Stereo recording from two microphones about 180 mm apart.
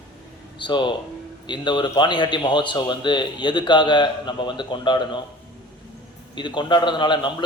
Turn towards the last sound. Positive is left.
turn(degrees=25)  # may be behind; listen again after turning